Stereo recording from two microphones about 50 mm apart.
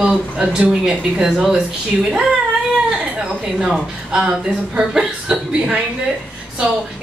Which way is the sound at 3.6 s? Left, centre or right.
Centre.